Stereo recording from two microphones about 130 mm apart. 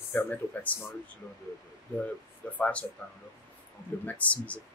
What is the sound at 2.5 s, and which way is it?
Speech, 10° left (ahead or behind).